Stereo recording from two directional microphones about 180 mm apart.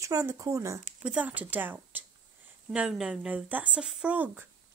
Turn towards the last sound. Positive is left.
turn(degrees=-10)  # may be behind; listen again after turning